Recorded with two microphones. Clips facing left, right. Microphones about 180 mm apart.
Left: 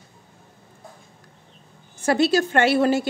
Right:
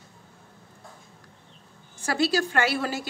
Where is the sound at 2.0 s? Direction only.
25° left (ahead or behind).